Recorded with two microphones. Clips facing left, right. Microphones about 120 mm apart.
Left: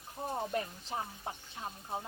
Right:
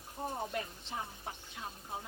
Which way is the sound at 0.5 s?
35° left (ahead or behind).